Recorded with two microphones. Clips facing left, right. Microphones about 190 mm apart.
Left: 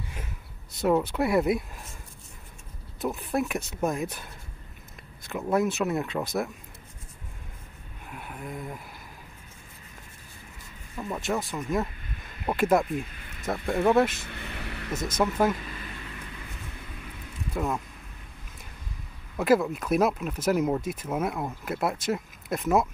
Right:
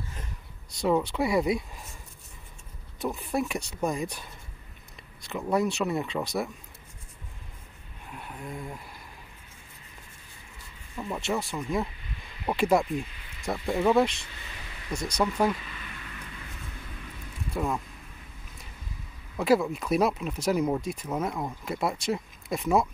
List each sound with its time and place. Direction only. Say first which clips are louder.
0.8 s speech: left 1 dB; 5° left (ahead or behind)
3.0 s speech: left 1 dB; centre (ahead or behind)
5.3 s speech: left 1 dB; centre (ahead or behind)
8.1 s a sound: left 1 dB; 5° left (ahead or behind)
11.0 s speech: left 1 dB; centre (ahead or behind)
14.3 s a sound: left 8 dB; 60° left (ahead or behind)
15.1 s speech: left 1 dB; 5° left (ahead or behind)
17.6 s speech: even; centre (ahead or behind)
19.3 s speech: left 1 dB; centre (ahead or behind)